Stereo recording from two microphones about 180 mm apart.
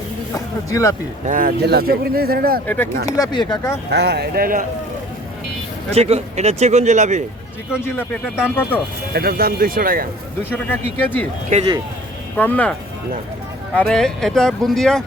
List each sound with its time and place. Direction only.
0.3 s speech: 20° left (ahead or behind)
1.3 s speech: 50° right (ahead or behind)
2.6 s speech: 10° left (ahead or behind)
3.1 s speech: 20° left (ahead or behind)
3.9 s speech: 65° right (ahead or behind)
5.9 s speech: 35° right (ahead or behind)
8.4 s speech: 10° left (ahead or behind)
9.1 s speech: 55° right (ahead or behind)
10.5 s speech: 10° left (ahead or behind)
11.5 s speech: 25° right (ahead or behind)
12.4 s speech: 10° left (ahead or behind)
13.7 s speech: 5° left (ahead or behind)